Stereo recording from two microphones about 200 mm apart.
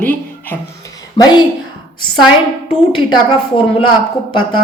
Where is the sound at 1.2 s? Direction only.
20° left (ahead or behind).